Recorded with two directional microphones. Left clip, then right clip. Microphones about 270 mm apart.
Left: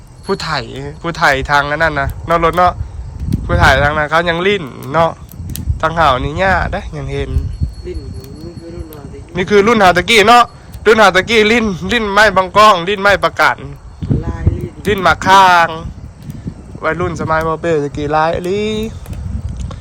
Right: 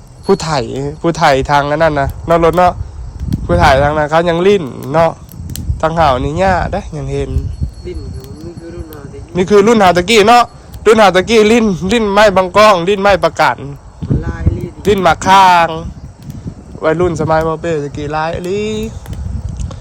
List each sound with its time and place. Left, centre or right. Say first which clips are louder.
0.3 s a man's voice: right 5 dB; right
9.3 s a man's voice: right 2 dB; centre